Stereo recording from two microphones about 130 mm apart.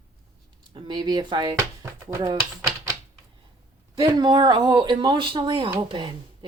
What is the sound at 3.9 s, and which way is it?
Speech, 35° right (ahead or behind).